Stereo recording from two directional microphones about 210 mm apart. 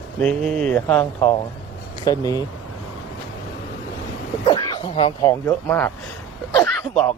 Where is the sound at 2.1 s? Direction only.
15° left (ahead or behind).